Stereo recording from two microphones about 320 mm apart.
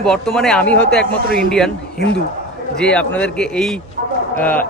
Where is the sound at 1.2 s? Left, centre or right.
Right.